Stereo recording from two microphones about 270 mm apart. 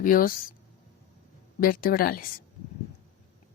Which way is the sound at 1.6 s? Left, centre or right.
Left.